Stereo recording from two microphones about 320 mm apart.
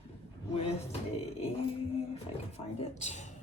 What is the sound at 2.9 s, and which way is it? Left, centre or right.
Speech, left.